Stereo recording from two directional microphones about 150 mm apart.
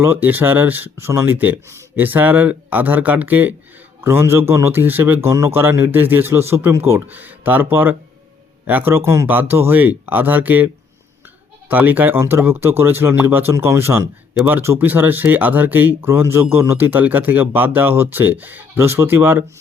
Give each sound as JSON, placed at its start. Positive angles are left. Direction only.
{"t": 0.0, "sound": "speech", "side_deg": -15}
{"t": 11.7, "sound": "speech", "side_deg": -10}